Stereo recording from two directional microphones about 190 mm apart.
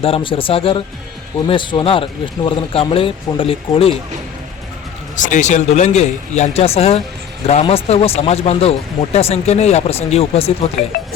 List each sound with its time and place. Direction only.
0.0 s speech: 30° left (ahead or behind)
5.1 s speech: 40° left (ahead or behind)
10.8 s speech: 50° left (ahead or behind)